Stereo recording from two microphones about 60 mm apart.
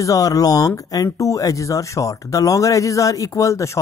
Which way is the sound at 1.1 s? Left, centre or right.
Left.